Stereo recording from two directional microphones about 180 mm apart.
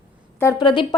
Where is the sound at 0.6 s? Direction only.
25° left (ahead or behind).